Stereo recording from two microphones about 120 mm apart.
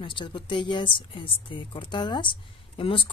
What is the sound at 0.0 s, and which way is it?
Speech, 40° left (ahead or behind).